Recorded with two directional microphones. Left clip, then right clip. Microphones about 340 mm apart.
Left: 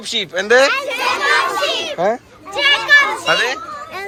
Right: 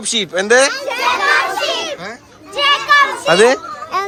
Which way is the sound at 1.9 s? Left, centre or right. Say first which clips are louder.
Left 11 dB; centre.